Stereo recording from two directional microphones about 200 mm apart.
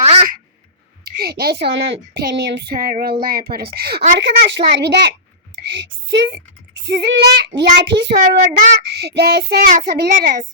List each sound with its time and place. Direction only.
0.0 s a sound: 30° right (ahead or behind)
1.0 s a woman's voice: 50° right (ahead or behind)
4.2 s child singing: 55° right (ahead or behind)
5.6 s a woman's voice: 60° right (ahead or behind)
6.8 s child singing: 60° right (ahead or behind)
8.4 s a child's voice: 40° right (ahead or behind)
8.8 s a woman's voice: 55° right (ahead or behind)